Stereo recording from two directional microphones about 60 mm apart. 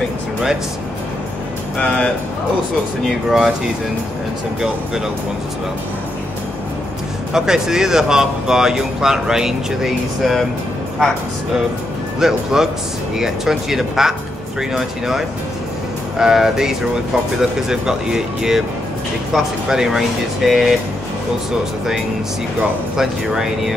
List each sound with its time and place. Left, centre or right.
1.8 s speech: left
3.1 s speech: centre
7.3 s speech: centre
12.2 s speech: centre
22.9 s speech: centre